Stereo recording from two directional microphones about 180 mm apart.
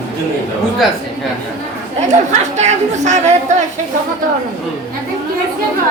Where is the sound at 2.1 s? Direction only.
40° right (ahead or behind).